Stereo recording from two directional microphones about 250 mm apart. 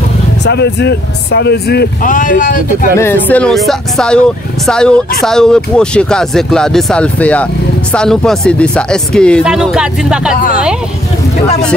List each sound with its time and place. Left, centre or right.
0.5 s speech: left
3.0 s speech: centre